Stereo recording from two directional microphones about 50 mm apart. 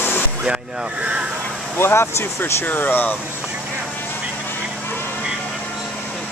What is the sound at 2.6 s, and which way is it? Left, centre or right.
Speech, left.